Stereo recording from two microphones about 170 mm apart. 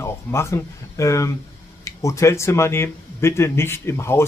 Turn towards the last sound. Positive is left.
turn(degrees=15)  # may be behind; listen again after turning